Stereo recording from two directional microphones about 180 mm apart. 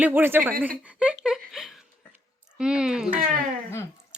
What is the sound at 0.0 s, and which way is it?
Speech, 10° right (ahead or behind).